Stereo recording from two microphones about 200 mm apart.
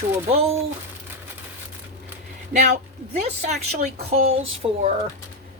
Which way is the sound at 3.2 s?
30° right (ahead or behind).